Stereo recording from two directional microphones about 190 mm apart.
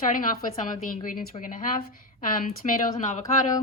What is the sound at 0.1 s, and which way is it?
Speech, 45° left (ahead or behind).